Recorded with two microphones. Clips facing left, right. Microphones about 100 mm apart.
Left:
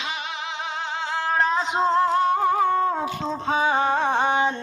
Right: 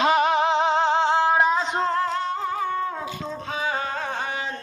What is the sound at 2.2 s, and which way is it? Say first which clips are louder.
Music: left 6 dB; 55° left (ahead or behind).